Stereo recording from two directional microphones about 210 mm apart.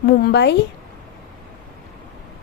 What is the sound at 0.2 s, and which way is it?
Speech, 50° left (ahead or behind).